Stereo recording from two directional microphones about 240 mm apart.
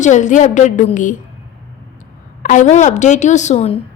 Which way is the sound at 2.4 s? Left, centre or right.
Left.